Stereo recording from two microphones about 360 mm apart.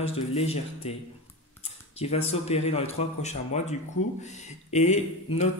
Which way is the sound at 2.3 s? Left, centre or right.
Centre.